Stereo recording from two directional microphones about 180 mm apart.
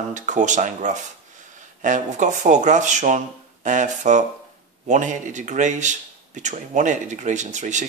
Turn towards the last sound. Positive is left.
turn(degrees=-40)  # may be behind; listen again after turning